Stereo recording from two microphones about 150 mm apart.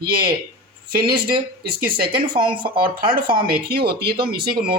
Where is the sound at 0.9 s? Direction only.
75° right (ahead or behind).